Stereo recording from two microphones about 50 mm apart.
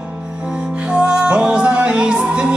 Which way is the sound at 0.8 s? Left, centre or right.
Centre.